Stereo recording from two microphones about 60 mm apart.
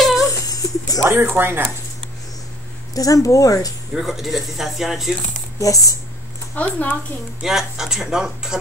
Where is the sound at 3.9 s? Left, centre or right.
Centre.